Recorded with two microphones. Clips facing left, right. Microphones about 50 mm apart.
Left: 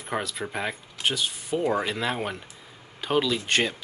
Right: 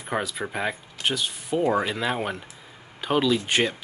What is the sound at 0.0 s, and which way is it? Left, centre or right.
Speech, centre.